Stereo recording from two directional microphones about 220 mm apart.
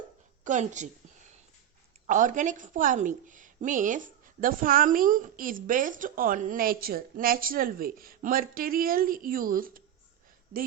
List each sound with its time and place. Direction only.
0.4 s a woman's voice: 35° right (ahead or behind)
2.0 s a woman's voice: 35° right (ahead or behind)